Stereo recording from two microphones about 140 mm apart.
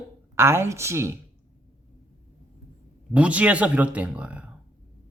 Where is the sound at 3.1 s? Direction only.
10° right (ahead or behind).